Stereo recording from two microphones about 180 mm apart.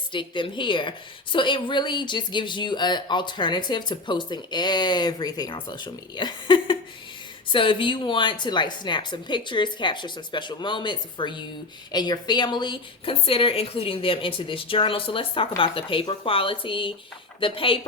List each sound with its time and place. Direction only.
0.1 s a woman's voice: 25° left (ahead or behind)